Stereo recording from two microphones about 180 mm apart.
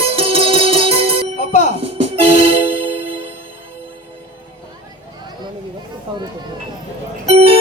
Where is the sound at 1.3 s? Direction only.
45° left (ahead or behind).